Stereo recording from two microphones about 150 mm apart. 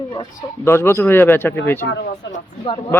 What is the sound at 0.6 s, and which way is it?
Speech, 15° left (ahead or behind).